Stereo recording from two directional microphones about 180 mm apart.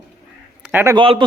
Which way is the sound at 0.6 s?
10° right (ahead or behind).